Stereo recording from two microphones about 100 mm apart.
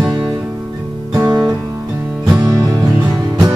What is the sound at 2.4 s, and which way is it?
Music, 35° right (ahead or behind).